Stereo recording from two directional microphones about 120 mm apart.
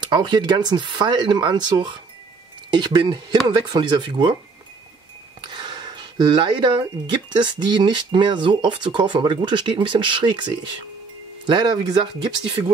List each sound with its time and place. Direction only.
0.0 s speech: 40° right (ahead or behind)
5.5 s speech: 35° right (ahead or behind)